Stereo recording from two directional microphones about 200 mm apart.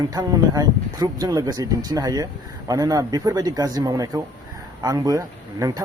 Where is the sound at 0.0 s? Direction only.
20° right (ahead or behind).